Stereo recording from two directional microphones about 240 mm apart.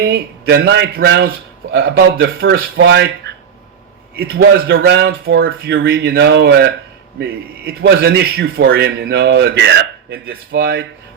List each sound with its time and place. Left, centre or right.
0.0 s a man's voice: right